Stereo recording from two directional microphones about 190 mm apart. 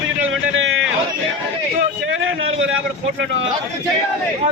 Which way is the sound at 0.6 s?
90° right.